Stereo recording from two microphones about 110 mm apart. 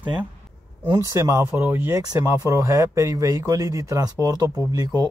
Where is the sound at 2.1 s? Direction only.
30° right (ahead or behind).